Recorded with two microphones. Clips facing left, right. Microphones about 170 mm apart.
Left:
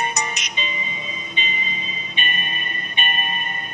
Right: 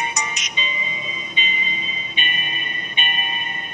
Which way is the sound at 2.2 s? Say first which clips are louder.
Left 1 dB; 40° left (ahead or behind).